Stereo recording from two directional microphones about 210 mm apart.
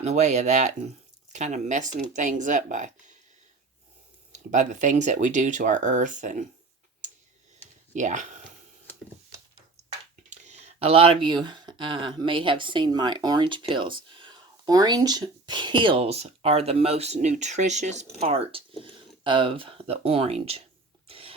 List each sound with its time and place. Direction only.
0.0 s speech: 35° right (ahead or behind)
4.3 s speech: 35° right (ahead or behind)
7.9 s speech: 35° right (ahead or behind)
10.2 s speech: 35° right (ahead or behind)
21.1 s a sound: 25° right (ahead or behind)